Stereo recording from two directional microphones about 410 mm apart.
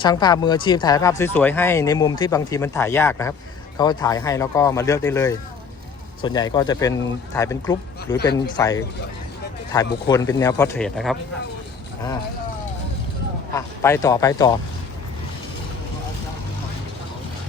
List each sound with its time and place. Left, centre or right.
0.0 s speech: centre
8.1 s speech: left
8.5 s speech: centre
13.6 s speech: centre